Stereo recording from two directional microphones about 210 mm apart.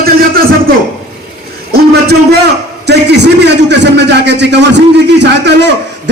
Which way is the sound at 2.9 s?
55° right (ahead or behind).